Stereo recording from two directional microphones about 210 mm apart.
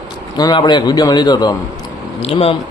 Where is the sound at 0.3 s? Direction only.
20° left (ahead or behind).